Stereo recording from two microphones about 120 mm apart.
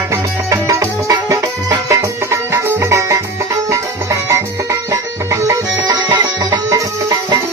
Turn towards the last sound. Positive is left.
turn(degrees=-30)  # may be behind; listen again after turning